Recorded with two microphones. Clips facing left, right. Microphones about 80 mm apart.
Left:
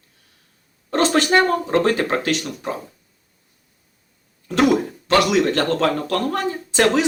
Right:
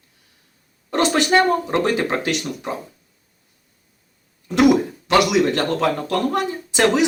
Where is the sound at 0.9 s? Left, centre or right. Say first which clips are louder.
Left 1 dB; right.